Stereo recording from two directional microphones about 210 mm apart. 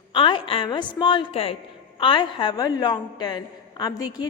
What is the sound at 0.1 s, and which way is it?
A woman's voice, 25° left (ahead or behind).